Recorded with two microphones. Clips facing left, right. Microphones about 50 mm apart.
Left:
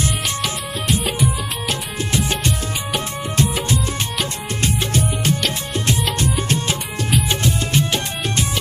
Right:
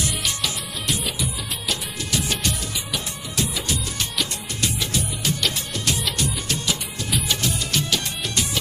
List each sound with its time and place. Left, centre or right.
0.4 s music: left
2.9 s music: left
4.6 s music: left